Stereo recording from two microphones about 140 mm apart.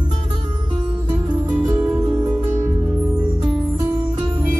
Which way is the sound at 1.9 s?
20° right (ahead or behind).